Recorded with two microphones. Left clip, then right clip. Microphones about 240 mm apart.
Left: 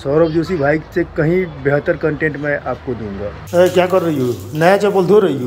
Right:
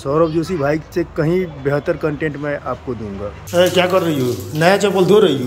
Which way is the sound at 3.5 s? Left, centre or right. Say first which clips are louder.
Left 1 dB; centre.